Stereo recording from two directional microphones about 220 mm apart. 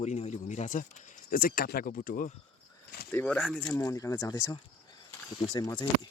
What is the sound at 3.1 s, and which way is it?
Speech, 5° left (ahead or behind).